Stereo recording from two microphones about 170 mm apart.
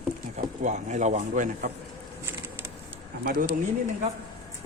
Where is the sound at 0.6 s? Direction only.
45° right (ahead or behind).